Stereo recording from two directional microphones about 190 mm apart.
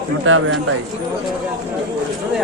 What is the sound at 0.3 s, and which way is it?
Speech, 90° right.